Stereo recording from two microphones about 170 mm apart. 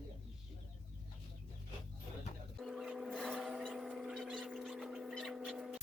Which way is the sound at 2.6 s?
Centre (ahead or behind).